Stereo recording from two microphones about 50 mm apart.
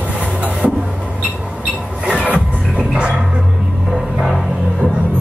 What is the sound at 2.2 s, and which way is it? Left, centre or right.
Music, right.